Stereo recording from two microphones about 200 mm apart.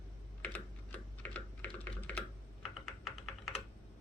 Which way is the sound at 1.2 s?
10° left (ahead or behind).